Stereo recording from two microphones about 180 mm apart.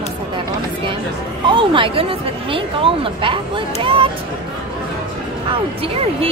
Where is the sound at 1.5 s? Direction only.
30° right (ahead or behind).